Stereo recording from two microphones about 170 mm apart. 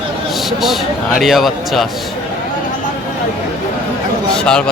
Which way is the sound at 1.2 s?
Centre (ahead or behind).